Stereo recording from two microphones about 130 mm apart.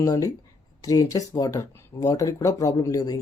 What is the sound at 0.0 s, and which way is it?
Speech, 25° left (ahead or behind).